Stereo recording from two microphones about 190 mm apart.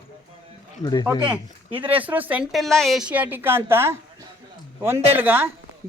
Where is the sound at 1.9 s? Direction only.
10° right (ahead or behind).